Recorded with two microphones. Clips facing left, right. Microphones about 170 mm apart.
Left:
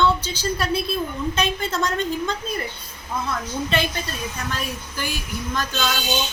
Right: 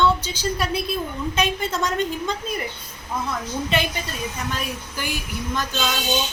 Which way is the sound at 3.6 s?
15° right (ahead or behind).